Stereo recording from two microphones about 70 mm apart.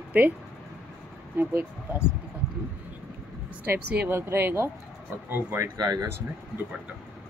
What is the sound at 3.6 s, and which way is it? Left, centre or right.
Speech, right.